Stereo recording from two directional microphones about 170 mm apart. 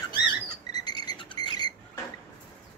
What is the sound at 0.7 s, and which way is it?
Cricket, 25° left (ahead or behind).